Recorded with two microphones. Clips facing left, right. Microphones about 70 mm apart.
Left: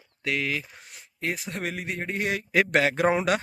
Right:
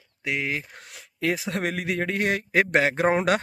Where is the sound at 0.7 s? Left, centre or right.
Right.